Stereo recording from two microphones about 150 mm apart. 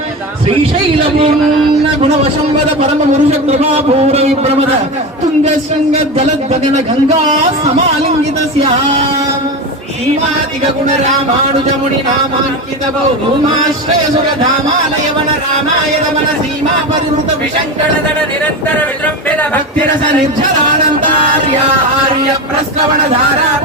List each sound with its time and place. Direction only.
2.6 s speech: 45° right (ahead or behind)